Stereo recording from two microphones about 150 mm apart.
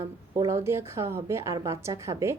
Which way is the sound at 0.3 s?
20° right (ahead or behind).